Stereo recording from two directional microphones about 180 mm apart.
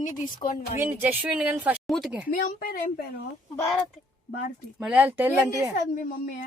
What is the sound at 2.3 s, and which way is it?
Speech, 55° left (ahead or behind).